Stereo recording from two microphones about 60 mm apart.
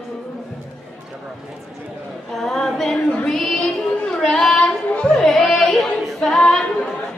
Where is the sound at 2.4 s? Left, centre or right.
Centre.